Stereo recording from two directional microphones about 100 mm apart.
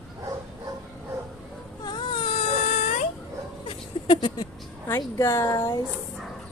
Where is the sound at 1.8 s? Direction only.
50° left (ahead or behind).